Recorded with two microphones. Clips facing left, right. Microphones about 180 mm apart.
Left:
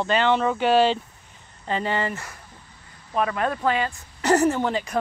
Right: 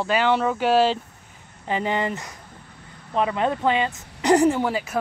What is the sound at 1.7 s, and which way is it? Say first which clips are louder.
Speech: right 1 dB; 15° right (ahead or behind).